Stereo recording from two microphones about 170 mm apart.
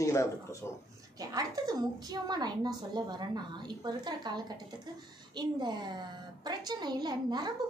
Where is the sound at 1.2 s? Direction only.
20° right (ahead or behind).